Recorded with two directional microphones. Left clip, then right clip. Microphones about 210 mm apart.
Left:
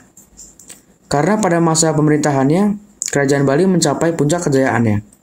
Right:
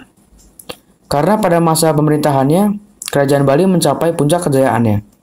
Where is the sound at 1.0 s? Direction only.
20° right (ahead or behind).